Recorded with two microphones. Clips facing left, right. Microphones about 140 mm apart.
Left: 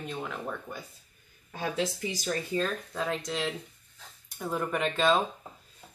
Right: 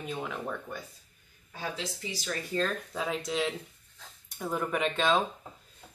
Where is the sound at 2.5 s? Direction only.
Centre (ahead or behind).